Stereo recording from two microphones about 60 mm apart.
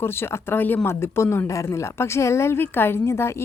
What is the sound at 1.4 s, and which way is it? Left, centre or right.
A woman's voice, left.